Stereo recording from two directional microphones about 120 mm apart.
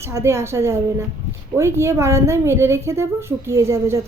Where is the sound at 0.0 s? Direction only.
25° right (ahead or behind).